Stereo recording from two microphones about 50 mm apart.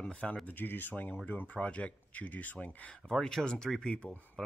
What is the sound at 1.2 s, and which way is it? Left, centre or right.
Speech, left.